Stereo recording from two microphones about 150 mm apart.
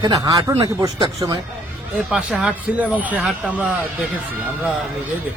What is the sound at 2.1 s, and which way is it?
Speech, 5° right (ahead or behind).